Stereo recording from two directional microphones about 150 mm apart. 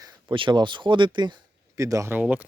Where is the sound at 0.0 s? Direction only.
30° right (ahead or behind).